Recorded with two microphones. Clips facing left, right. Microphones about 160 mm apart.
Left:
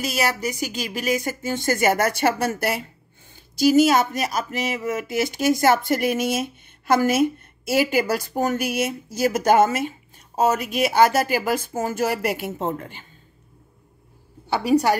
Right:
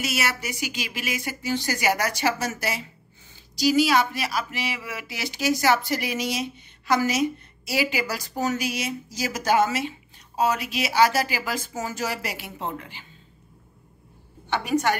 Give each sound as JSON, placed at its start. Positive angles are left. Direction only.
{"t": 0.0, "sound": "speech", "side_deg": 40}
{"t": 14.5, "sound": "a woman's voice", "side_deg": 35}